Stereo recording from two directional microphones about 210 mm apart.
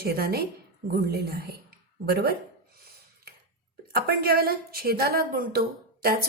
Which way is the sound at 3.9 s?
45° right (ahead or behind).